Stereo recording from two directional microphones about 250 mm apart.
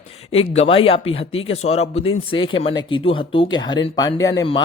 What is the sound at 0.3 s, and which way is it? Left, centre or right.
A man's voice, left.